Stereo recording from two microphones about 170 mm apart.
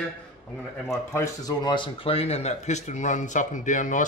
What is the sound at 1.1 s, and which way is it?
Speech, 20° left (ahead or behind).